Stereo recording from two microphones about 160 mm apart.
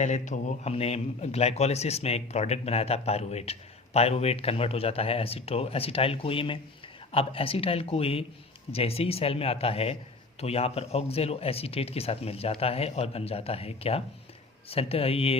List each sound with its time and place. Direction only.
0.0 s a man's voice: 50° left (ahead or behind)